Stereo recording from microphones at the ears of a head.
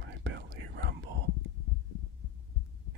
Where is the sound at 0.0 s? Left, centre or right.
Right.